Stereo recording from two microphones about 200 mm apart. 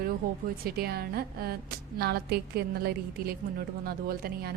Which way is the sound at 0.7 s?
50° right (ahead or behind).